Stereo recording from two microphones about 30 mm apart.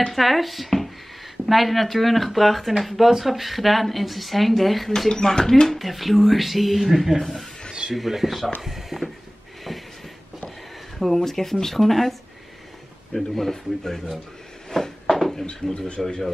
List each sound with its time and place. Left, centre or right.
0.1 s a woman's voice: centre
4.9 s speech: centre
5.8 s a woman's voice: centre
8.6 s a sound: centre
11.2 s a woman's voice: centre
14.7 s a sound: centre
15.4 s speech: left